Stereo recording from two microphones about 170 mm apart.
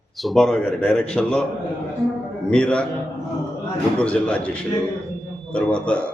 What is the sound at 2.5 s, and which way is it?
Speech, 5° left (ahead or behind).